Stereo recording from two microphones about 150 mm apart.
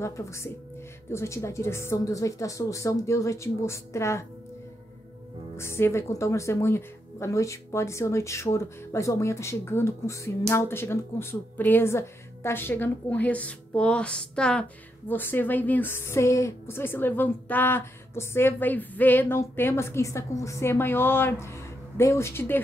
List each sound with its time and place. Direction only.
0.0 s a woman's voice: 20° left (ahead or behind)
5.6 s speech: 15° left (ahead or behind)